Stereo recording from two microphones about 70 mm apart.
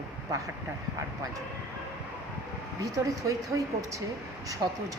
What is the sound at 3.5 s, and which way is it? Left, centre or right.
Speech, right.